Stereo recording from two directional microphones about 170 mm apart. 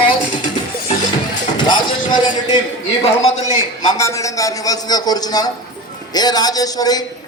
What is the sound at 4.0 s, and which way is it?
A man's voice, 20° left (ahead or behind).